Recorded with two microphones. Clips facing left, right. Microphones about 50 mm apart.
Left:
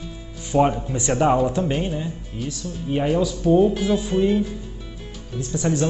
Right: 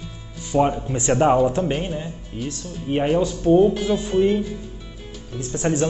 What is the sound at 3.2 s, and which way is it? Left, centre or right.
Speech, right.